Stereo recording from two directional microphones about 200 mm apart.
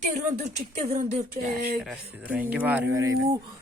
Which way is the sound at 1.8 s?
5° right (ahead or behind).